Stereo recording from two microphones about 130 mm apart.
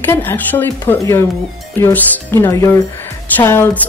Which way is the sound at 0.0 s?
15° left (ahead or behind).